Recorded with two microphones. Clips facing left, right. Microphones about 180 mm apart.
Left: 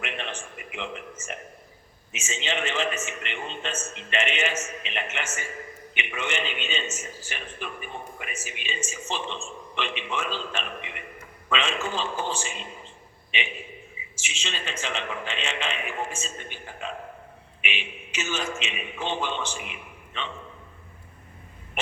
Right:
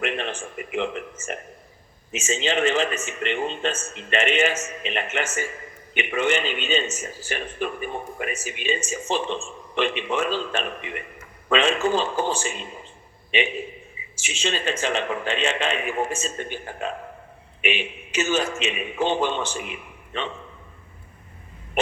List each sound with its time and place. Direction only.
0.0 s a sound: 40° right (ahead or behind)
0.7 s a man's voice: 45° right (ahead or behind)
14.2 s a man's voice: 40° right (ahead or behind)